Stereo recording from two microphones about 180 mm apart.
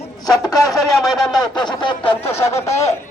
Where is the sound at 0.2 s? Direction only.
20° left (ahead or behind).